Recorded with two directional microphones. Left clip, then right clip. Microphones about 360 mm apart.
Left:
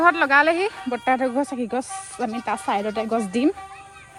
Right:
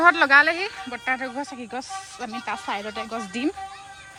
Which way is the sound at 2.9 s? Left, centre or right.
Centre.